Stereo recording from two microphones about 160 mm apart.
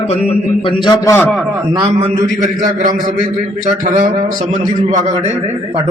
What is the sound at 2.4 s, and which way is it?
Speech, 50° right (ahead or behind).